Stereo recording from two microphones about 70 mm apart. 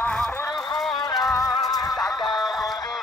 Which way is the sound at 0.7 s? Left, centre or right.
Centre.